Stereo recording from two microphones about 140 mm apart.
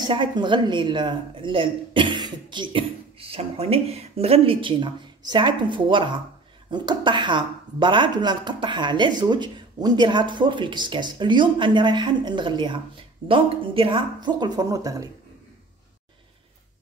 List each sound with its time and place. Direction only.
0.0 s speech: 35° right (ahead or behind)